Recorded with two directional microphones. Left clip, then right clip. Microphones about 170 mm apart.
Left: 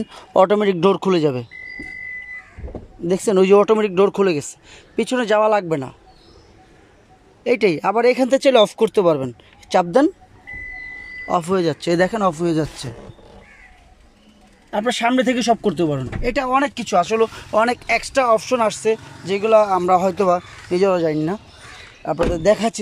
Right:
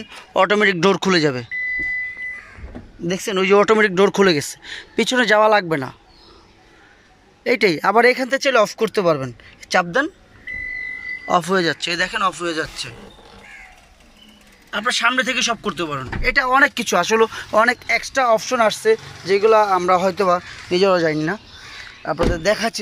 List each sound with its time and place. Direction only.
0.0 s a man's voice: 20° left (ahead or behind)
0.6 s speech: 10° left (ahead or behind)
3.1 s speech: 20° left (ahead or behind); by 5.9 s 5° left (ahead or behind)
7.4 s speech: 10° left (ahead or behind)
8.2 s speech: 20° left (ahead or behind)
9.8 s speech: 30° left (ahead or behind)
11.2 s speech: 10° left (ahead or behind)
11.8 s speech: 40° left (ahead or behind)
14.7 s a man's voice: 25° left (ahead or behind)